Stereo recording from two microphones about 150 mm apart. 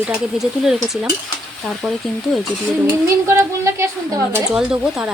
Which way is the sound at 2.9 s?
20° right (ahead or behind).